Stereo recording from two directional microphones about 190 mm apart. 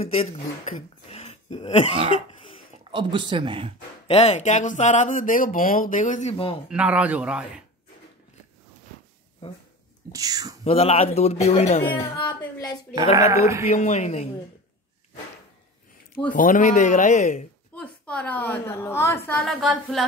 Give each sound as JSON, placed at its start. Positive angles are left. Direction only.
{"t": 0.0, "sound": "speech", "side_deg": 30}
{"t": 1.0, "sound": "a sound", "side_deg": 35}
{"t": 2.8, "sound": "speech", "side_deg": -25}
{"t": 4.1, "sound": "speech", "side_deg": 35}
{"t": 6.7, "sound": "speech", "side_deg": -5}
{"t": 9.4, "sound": "speech", "side_deg": 30}
{"t": 10.1, "sound": "speech", "side_deg": -20}
{"t": 10.6, "sound": "a woman's voice", "side_deg": 30}
{"t": 13.1, "sound": "speech", "side_deg": -15}
{"t": 13.7, "sound": "speech", "side_deg": 35}
{"t": 16.3, "sound": "speech", "side_deg": 45}
{"t": 17.7, "sound": "a woman's voice", "side_deg": 5}